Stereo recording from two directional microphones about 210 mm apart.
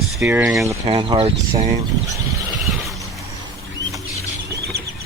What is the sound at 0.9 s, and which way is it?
Speech, 25° right (ahead or behind).